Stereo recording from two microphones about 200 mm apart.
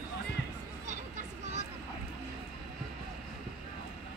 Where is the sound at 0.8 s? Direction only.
40° right (ahead or behind).